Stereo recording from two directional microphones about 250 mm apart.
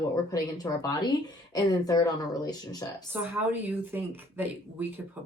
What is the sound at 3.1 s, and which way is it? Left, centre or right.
Speech, centre.